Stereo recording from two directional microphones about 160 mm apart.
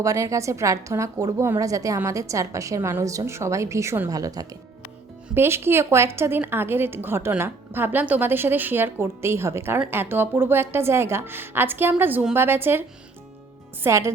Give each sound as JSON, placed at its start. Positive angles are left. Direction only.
{"t": 0.0, "sound": "a woman's voice", "side_deg": -20}
{"t": 13.8, "sound": "a woman's voice", "side_deg": -15}